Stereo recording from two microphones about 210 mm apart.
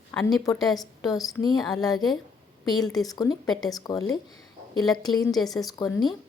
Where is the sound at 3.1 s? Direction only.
20° left (ahead or behind).